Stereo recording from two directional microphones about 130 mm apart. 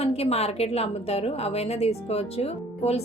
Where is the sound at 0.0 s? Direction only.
50° left (ahead or behind).